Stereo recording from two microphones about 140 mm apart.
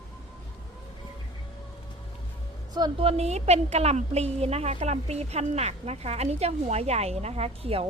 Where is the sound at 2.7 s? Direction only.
30° right (ahead or behind).